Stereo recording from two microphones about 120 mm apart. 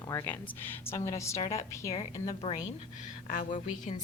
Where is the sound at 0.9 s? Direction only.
25° left (ahead or behind).